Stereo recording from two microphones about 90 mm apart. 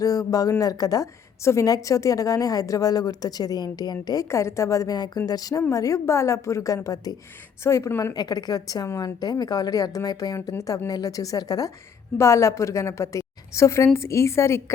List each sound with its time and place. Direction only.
0.0 s a woman's voice: 40° left (ahead or behind)
7.6 s a woman's voice: 30° left (ahead or behind)
8.1 s a woman's voice: 45° left (ahead or behind)
12.1 s a woman's voice: 35° left (ahead or behind)